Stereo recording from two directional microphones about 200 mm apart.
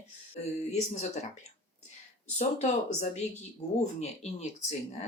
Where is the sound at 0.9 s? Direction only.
35° left (ahead or behind).